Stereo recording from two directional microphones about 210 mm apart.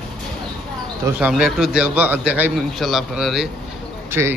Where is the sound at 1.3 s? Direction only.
5° right (ahead or behind).